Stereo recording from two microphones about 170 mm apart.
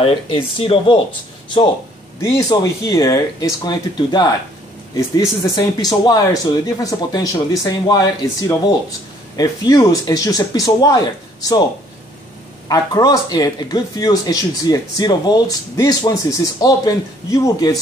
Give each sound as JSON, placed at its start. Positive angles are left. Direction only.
{"t": 0.0, "sound": "speech", "side_deg": 35}
{"t": 2.2, "sound": "speech", "side_deg": 20}
{"t": 12.6, "sound": "speech", "side_deg": 20}